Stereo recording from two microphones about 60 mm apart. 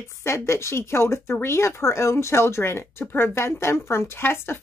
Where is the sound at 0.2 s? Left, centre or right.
Left.